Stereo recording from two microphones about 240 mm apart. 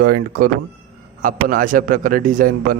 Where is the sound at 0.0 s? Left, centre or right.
Right.